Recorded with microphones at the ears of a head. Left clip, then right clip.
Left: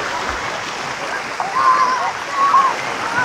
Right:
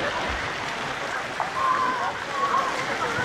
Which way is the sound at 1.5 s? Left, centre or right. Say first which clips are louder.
Left 10 dB; left.